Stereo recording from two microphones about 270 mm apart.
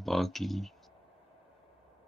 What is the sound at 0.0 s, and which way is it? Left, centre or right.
Speech, centre.